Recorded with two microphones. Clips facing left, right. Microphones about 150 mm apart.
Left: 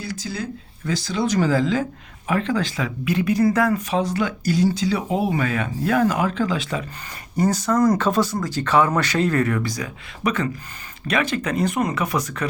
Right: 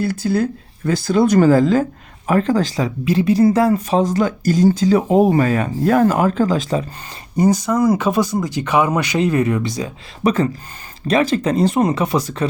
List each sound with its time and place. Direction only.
0.0 s speech: 55° right (ahead or behind); by 6.8 s 40° right (ahead or behind)
7.3 s speech: 15° right (ahead or behind)